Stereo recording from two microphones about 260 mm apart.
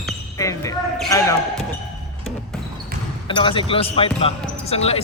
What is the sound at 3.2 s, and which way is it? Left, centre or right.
Speech, centre.